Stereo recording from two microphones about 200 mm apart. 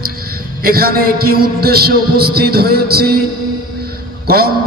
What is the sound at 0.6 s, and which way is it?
A man's voice, 50° right (ahead or behind).